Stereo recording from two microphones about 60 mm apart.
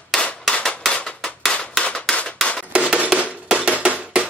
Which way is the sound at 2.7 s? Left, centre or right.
Centre.